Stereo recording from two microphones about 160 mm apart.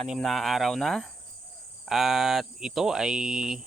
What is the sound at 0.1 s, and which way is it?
Speech, centre (ahead or behind).